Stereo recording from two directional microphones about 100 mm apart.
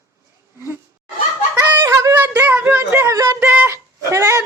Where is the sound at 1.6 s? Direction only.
30° right (ahead or behind).